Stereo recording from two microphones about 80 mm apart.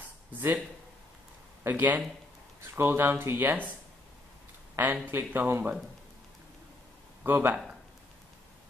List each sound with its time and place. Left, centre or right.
0.3 s speech: right
1.6 s speech: right
5.1 s speech: right
7.2 s speech: right